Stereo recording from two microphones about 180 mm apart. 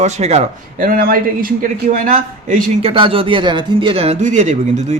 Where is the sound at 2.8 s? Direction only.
30° right (ahead or behind).